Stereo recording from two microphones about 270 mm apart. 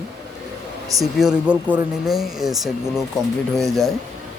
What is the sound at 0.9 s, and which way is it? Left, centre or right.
Speech, centre.